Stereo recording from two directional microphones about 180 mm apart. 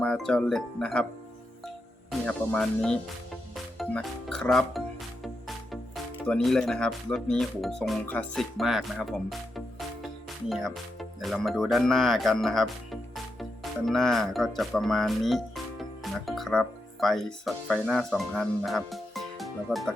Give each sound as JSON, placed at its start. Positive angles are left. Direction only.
{"t": 0.0, "sound": "speech", "side_deg": 5}
{"t": 1.6, "sound": "music", "side_deg": 5}
{"t": 3.5, "sound": "speech", "side_deg": 0}